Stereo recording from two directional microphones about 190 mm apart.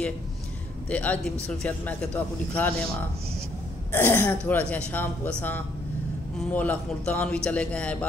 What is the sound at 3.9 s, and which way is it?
A man's voice, 10° left (ahead or behind).